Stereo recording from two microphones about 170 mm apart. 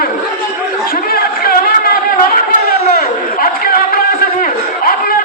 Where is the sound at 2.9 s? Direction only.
60° left (ahead or behind).